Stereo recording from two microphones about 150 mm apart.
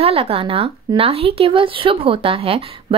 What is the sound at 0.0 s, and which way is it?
Speech, 40° right (ahead or behind).